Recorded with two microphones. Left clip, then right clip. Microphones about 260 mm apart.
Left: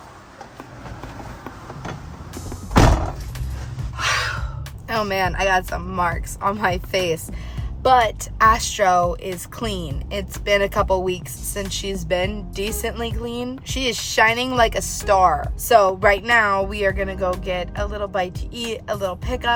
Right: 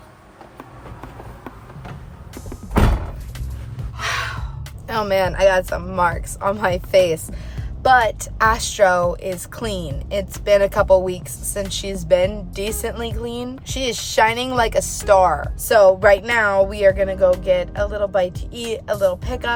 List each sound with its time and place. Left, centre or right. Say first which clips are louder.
4.9 s a woman's voice: right 2 dB; centre